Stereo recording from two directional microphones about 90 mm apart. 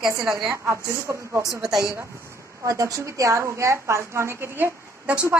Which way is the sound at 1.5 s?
5° right (ahead or behind).